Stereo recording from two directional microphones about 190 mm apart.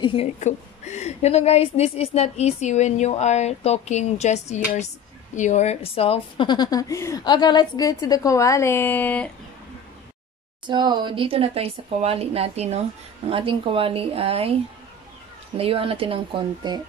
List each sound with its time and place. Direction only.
0.0 s a woman's voice: 30° left (ahead or behind); by 9.3 s 10° left (ahead or behind)
10.7 s speech: 25° right (ahead or behind)
15.5 s speech: 30° right (ahead or behind)